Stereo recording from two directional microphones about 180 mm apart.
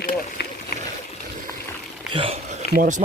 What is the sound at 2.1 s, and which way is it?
Speech, 30° right (ahead or behind).